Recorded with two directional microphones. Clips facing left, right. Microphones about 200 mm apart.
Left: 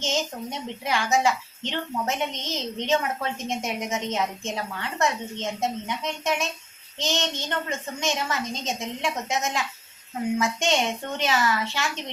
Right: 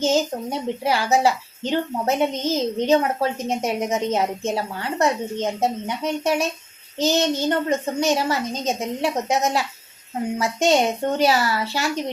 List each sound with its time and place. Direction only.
0.0 s a woman's voice: 35° right (ahead or behind)